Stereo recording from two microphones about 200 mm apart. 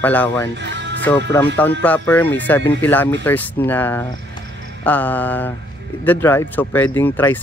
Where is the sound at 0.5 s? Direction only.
60° right (ahead or behind).